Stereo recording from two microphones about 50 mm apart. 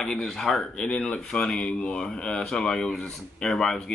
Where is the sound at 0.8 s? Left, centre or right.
Left.